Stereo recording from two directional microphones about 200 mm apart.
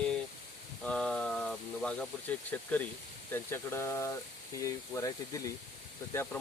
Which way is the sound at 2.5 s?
10° left (ahead or behind).